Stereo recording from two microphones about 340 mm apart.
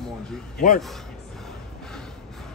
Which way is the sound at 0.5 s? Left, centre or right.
Left.